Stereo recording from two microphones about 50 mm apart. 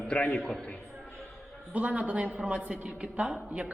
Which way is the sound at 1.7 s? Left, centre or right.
Right.